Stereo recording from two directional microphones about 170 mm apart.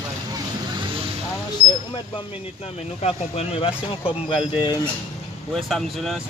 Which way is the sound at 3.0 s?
35° left (ahead or behind).